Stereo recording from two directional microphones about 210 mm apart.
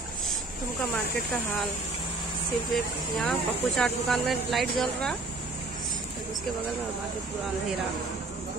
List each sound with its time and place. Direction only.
2.7 s speech: centre (ahead or behind)